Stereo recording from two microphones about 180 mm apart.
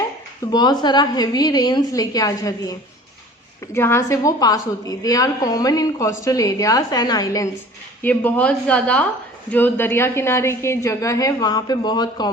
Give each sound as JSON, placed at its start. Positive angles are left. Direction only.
{"t": 0.5, "sound": "a woman's voice", "side_deg": 20}
{"t": 8.0, "sound": "a woman's voice", "side_deg": 10}